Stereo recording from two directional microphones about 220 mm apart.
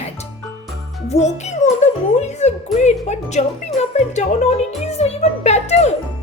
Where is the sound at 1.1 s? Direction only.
30° left (ahead or behind).